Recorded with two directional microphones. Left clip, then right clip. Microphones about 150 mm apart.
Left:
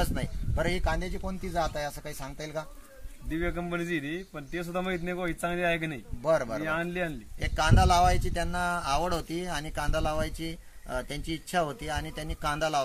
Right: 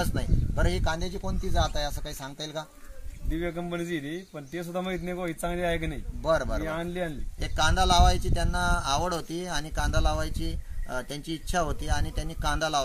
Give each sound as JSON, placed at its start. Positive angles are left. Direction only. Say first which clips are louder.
{"t": 0.6, "sound": "speech", "louder": "even", "side_deg": 25}
{"t": 3.3, "sound": "a man's voice", "louder": "even", "side_deg": -5}
{"t": 6.2, "sound": "speech", "louder": "even", "side_deg": 30}
{"t": 6.6, "sound": "a man's voice", "louder": "left 1 dB", "side_deg": -5}
{"t": 7.5, "sound": "speech", "louder": "right 1 dB", "side_deg": 25}
{"t": 11.5, "sound": "speech", "louder": "even", "side_deg": 30}